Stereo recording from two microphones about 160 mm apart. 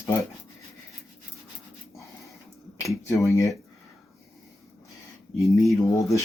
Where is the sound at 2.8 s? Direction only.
20° left (ahead or behind).